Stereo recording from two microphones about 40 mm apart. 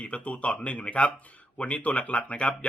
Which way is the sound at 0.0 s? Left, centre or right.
Left.